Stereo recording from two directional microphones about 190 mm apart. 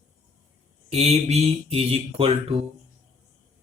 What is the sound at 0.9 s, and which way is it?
Speech, 35° right (ahead or behind).